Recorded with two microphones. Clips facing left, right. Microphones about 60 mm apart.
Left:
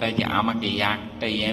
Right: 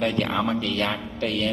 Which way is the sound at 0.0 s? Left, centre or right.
Left.